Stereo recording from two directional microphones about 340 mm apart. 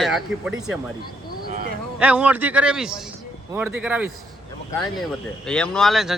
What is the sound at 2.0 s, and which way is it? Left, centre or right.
Speech, centre.